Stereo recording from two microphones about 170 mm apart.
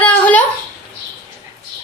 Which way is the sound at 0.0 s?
10° left (ahead or behind).